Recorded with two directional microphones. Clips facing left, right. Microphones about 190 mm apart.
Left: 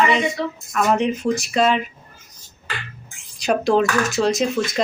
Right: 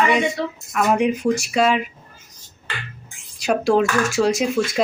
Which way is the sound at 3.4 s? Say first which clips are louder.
Even; 5° right (ahead or behind).